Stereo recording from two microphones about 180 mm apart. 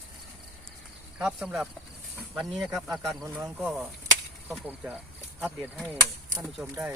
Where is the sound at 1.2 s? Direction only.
5° right (ahead or behind).